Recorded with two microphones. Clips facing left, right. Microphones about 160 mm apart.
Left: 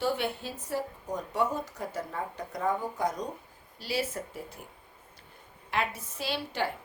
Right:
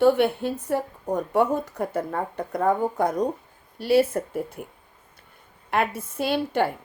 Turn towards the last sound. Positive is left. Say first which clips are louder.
# right 9 dB
turn(degrees=-55)  # may be behind; listen again after turning